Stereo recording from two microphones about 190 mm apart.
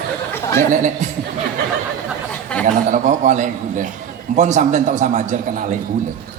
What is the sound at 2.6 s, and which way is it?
A man's voice, 40° right (ahead or behind).